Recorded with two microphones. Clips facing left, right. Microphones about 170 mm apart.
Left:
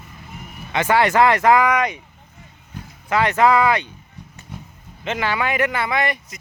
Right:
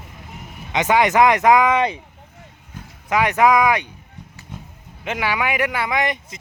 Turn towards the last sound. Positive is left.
turn(degrees=-15)  # may be behind; listen again after turning